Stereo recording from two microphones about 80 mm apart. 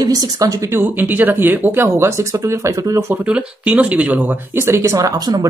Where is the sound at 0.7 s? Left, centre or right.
Right.